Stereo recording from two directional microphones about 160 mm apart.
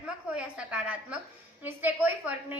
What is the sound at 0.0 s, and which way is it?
A woman's voice, 5° right (ahead or behind).